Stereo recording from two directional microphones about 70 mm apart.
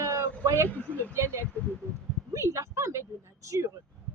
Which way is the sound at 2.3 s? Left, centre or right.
Right.